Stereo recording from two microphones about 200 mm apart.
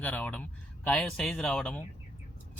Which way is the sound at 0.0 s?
5° left (ahead or behind).